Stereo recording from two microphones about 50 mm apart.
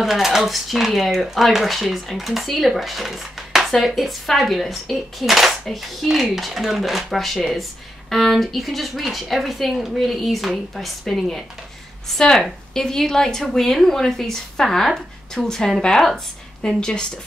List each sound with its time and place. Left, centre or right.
0.0 s a woman's voice: centre